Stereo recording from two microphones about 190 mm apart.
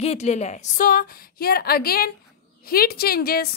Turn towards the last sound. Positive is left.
turn(degrees=55)  # may be behind; listen again after turning